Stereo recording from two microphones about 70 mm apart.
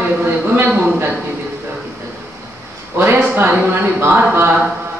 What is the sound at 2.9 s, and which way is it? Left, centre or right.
A man's voice, right.